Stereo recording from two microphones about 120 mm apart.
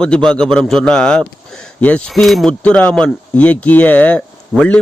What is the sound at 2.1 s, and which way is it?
Speech, centre (ahead or behind).